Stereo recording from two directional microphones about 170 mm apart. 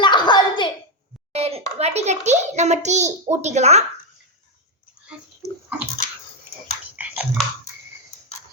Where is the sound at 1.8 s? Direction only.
40° right (ahead or behind).